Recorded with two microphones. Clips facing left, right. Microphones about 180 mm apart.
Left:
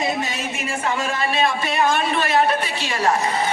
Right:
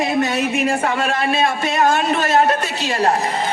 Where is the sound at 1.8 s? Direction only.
45° right (ahead or behind).